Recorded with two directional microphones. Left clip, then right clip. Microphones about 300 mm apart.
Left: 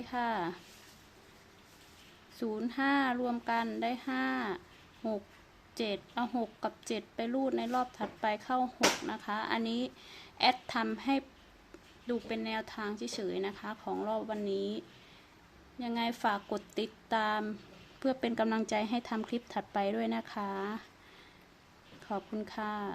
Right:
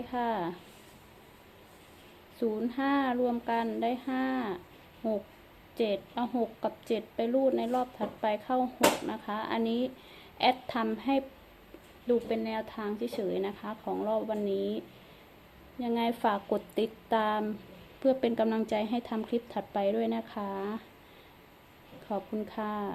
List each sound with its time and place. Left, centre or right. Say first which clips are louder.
0.0 s a woman's voice: right 2 dB; centre
2.4 s a woman's voice: right 3 dB; centre
22.1 s a woman's voice: right 3 dB; centre